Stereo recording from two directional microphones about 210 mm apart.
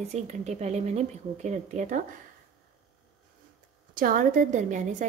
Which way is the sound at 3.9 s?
40° right (ahead or behind).